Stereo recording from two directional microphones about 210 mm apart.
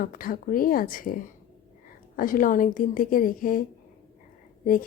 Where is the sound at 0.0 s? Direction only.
40° left (ahead or behind).